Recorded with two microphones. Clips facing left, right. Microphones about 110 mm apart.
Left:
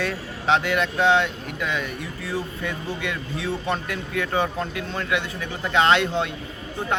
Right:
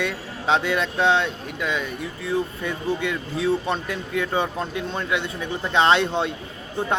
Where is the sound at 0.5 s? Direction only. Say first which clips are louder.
Even; 25° right (ahead or behind).